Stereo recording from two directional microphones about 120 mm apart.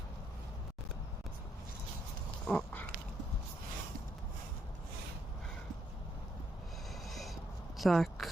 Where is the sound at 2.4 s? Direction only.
10° left (ahead or behind).